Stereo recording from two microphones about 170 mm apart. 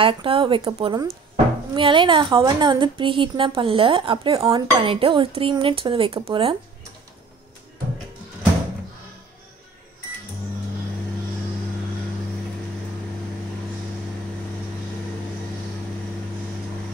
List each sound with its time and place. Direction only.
0.0 s a woman's voice: 30° right (ahead or behind)